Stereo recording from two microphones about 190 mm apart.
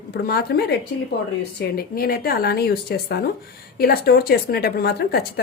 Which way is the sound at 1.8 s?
55° left (ahead or behind).